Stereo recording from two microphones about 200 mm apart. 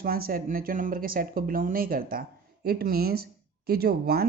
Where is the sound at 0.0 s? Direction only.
50° right (ahead or behind).